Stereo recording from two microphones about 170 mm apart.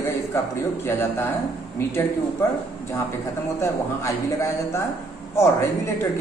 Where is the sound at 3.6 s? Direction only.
15° left (ahead or behind).